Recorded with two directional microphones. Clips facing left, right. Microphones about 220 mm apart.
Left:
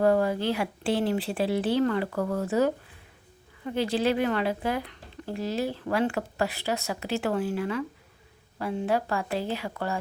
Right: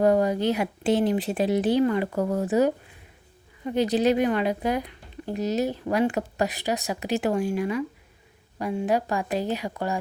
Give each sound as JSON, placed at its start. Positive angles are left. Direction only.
{"t": 0.0, "sound": "a woman's voice", "side_deg": -15}